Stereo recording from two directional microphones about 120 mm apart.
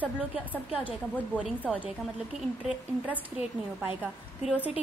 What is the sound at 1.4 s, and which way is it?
Speech, 10° right (ahead or behind).